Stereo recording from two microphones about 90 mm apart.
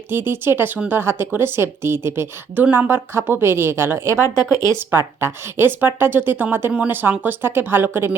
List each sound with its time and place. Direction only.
0.1 s a woman's voice: 25° right (ahead or behind)